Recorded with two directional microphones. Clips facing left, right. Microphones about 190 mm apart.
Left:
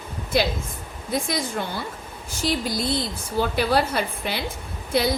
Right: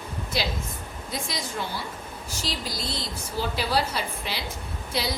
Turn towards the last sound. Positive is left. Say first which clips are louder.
# left 7 dB
turn(degrees=55)  # may be behind; listen again after turning